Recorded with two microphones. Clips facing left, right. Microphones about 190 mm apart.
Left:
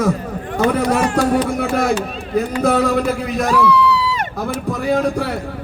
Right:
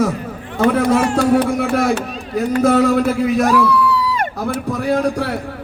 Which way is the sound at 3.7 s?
50° right (ahead or behind).